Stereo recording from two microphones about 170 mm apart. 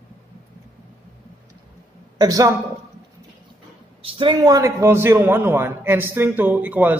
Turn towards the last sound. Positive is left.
turn(degrees=-10)  # may be behind; listen again after turning